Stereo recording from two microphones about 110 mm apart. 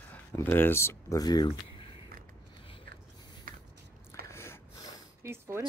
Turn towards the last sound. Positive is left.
turn(degrees=-20)  # may be behind; listen again after turning